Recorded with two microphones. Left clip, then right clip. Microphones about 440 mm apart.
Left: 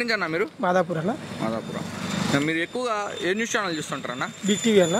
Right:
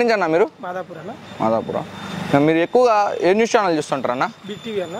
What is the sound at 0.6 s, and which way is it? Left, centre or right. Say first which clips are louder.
Speech: left 6 dB; left.